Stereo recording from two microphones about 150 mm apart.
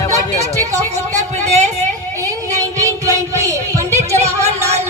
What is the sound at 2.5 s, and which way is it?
Music, 20° right (ahead or behind).